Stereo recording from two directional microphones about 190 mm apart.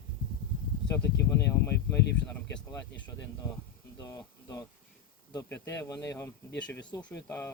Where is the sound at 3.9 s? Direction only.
15° left (ahead or behind).